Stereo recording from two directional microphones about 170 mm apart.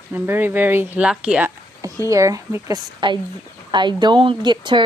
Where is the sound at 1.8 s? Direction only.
20° right (ahead or behind).